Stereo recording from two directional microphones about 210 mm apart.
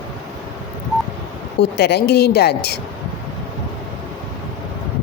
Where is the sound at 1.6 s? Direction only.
50° left (ahead or behind).